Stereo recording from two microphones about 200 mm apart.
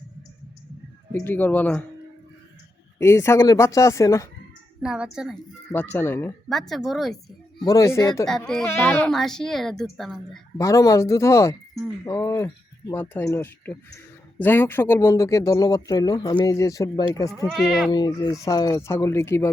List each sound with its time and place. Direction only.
1.1 s speech: 10° left (ahead or behind)
3.0 s speech: 15° left (ahead or behind)
4.8 s speech: 5° right (ahead or behind)
5.7 s speech: 10° left (ahead or behind)
6.5 s speech: centre (ahead or behind)
7.6 s speech: 15° left (ahead or behind); by 10.4 s centre (ahead or behind)
10.6 s speech: 15° left (ahead or behind)
17.4 s speech: centre (ahead or behind)
17.9 s speech: 20° left (ahead or behind)